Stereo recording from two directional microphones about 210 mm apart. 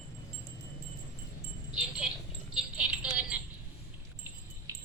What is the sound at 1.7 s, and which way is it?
Wind chime, 5° right (ahead or behind).